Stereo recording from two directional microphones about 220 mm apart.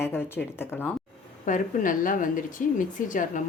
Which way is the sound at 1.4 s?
35° left (ahead or behind).